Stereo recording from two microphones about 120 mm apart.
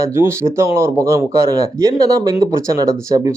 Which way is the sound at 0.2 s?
25° right (ahead or behind).